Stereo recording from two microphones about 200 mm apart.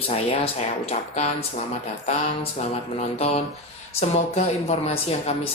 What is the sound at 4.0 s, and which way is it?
A man's voice, 30° left (ahead or behind).